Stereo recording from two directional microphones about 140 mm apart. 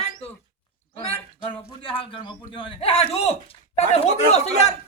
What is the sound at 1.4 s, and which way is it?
A man's voice, 40° left (ahead or behind).